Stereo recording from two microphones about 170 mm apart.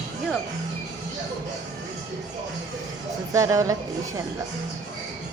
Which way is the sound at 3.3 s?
20° right (ahead or behind).